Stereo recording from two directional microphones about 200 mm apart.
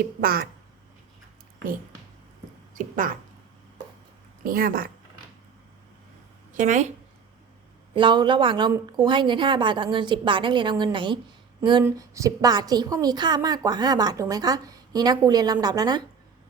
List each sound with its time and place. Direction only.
0.0 s speech: 45° right (ahead or behind)
2.7 s speech: 40° right (ahead or behind)
4.4 s speech: 45° right (ahead or behind)
6.6 s speech: 35° right (ahead or behind)
7.9 s a woman's voice: 25° right (ahead or behind)